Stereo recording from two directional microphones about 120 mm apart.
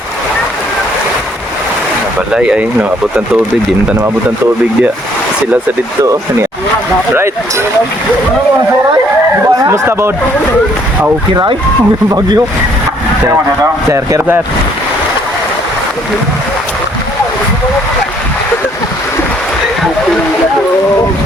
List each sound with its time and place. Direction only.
2.3 s speech: 10° right (ahead or behind)
9.6 s speech: 25° right (ahead or behind)
13.9 s speech: 20° right (ahead or behind)